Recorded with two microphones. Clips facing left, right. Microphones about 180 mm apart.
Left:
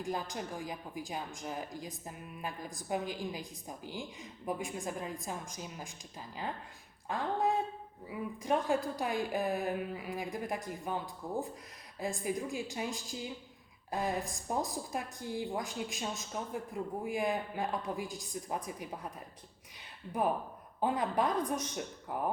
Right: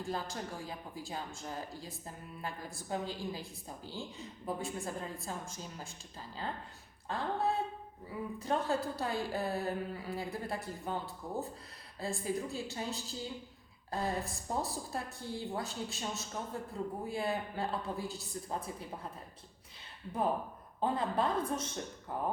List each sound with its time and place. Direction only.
0.0 s speech: 15° left (ahead or behind)
20.8 s speech: 15° left (ahead or behind)